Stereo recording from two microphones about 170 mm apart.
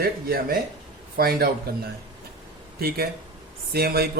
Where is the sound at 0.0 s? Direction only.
60° right (ahead or behind).